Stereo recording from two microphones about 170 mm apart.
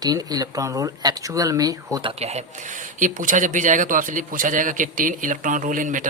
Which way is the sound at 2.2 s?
40° right (ahead or behind).